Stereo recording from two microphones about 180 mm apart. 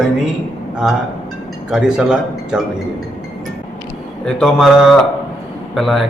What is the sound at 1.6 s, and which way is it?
Speech, 5° right (ahead or behind).